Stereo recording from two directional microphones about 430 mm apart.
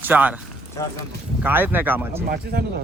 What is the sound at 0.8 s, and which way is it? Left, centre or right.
Speech, centre.